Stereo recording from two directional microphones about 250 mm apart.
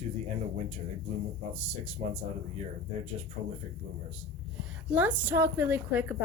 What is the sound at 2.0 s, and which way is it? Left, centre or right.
Speech, right.